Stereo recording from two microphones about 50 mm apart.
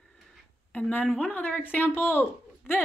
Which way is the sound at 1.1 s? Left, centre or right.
Left.